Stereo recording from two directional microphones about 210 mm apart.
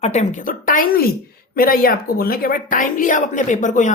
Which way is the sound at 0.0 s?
30° left (ahead or behind).